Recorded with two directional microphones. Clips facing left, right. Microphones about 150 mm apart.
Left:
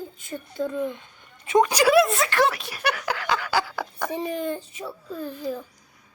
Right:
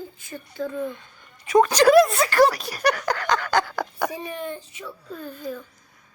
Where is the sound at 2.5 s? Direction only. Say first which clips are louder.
Right 4 dB; 40° right (ahead or behind).